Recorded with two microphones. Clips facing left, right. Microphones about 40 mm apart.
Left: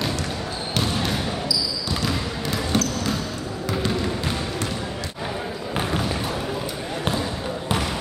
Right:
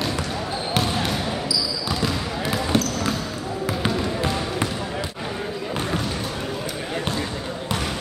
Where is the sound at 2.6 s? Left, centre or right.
Centre.